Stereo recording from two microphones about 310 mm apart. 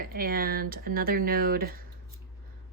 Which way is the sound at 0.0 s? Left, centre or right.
Right.